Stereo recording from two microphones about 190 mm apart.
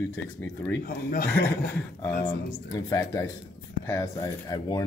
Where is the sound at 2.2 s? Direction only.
10° left (ahead or behind).